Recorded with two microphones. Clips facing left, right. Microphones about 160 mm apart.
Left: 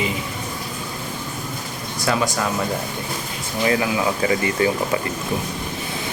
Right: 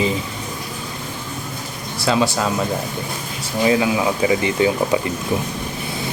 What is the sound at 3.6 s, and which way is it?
Speech, 15° right (ahead or behind).